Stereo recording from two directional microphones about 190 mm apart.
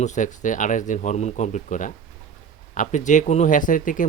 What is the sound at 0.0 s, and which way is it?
Speech, 40° left (ahead or behind).